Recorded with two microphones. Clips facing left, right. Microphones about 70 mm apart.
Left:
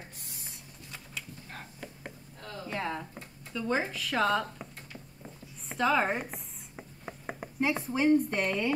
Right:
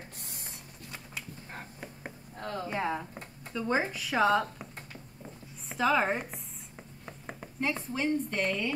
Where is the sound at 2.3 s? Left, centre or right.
Right.